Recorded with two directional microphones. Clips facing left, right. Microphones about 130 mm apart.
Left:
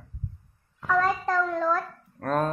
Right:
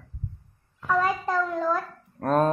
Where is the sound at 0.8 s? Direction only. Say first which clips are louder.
Even; centre (ahead or behind).